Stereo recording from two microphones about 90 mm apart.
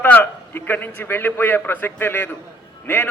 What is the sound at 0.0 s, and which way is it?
A man's voice, 25° left (ahead or behind).